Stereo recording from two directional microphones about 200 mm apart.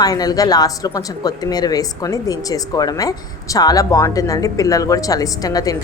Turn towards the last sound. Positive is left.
turn(degrees=20)  # may be behind; listen again after turning